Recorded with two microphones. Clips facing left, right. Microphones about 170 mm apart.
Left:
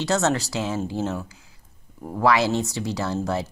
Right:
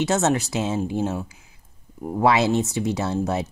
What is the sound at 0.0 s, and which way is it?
Speech, 20° right (ahead or behind).